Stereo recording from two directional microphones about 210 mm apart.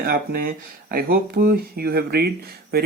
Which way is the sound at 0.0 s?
45° right (ahead or behind).